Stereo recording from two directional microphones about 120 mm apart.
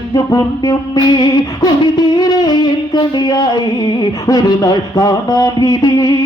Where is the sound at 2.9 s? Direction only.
35° left (ahead or behind).